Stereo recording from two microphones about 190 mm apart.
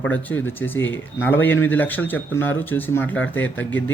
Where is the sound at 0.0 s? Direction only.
10° left (ahead or behind).